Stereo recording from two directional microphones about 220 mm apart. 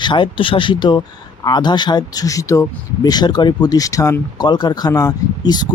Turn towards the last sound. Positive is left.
turn(degrees=20)  # may be behind; listen again after turning